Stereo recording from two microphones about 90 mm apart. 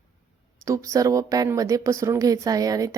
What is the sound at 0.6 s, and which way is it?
A woman's voice, 35° right (ahead or behind).